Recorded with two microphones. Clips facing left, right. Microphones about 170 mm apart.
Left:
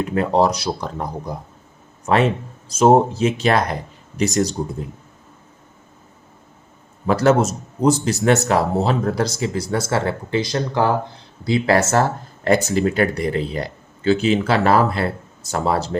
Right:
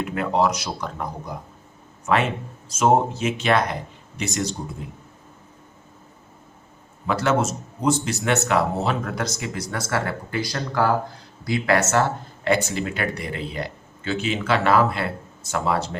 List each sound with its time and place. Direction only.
0.0 s speech: 35° left (ahead or behind)
7.1 s speech: 40° left (ahead or behind)